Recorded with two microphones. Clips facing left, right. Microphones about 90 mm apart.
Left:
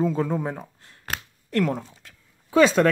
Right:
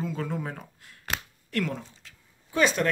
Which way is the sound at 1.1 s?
40° left (ahead or behind).